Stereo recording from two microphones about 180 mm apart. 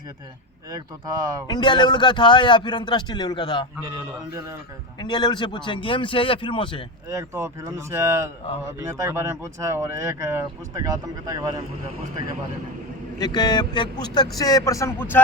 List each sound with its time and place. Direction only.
0.7 s speech: 20° right (ahead or behind)
1.5 s a man's voice: 25° left (ahead or behind)
4.9 s a man's voice: 25° left (ahead or behind)
7.1 s speech: 15° right (ahead or behind)
13.1 s a man's voice: 25° left (ahead or behind)